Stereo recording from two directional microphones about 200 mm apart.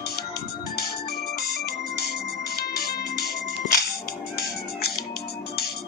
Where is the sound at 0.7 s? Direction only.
50° left (ahead or behind).